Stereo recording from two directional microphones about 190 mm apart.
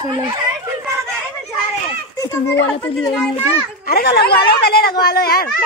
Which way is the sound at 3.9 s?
55° left (ahead or behind).